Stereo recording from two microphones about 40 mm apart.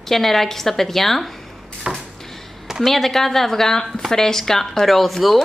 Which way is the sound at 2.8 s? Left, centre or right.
Centre.